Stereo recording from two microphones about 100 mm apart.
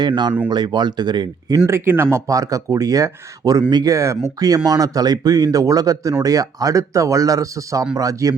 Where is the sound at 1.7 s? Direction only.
25° right (ahead or behind).